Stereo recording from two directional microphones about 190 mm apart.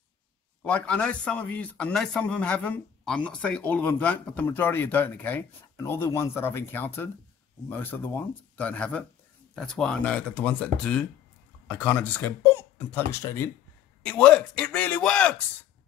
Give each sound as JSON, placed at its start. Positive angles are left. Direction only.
{"t": 0.7, "sound": "a man's voice", "side_deg": 5}